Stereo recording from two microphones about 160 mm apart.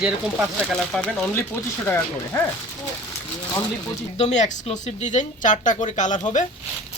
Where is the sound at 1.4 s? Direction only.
15° left (ahead or behind).